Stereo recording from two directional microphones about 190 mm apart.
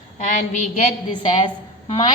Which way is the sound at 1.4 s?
25° left (ahead or behind).